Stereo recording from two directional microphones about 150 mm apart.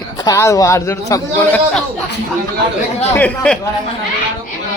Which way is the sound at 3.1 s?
10° left (ahead or behind).